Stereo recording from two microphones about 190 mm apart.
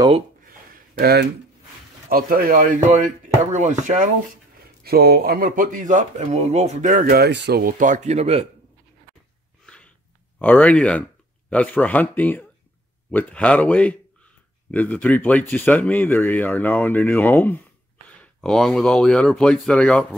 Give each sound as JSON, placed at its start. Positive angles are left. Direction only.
{"t": 0.5, "sound": "a sound", "side_deg": -50}
{"t": 2.0, "sound": "speech", "side_deg": -50}
{"t": 4.8, "sound": "speech", "side_deg": -55}
{"t": 10.4, "sound": "speech", "side_deg": 10}